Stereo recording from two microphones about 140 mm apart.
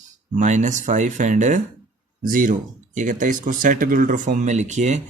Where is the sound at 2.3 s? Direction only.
75° right (ahead or behind); by 5.0 s 55° right (ahead or behind).